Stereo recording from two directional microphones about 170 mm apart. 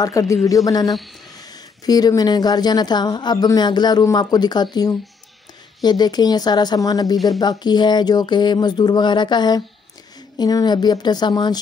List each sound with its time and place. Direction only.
0.0 s speech: 20° left (ahead or behind)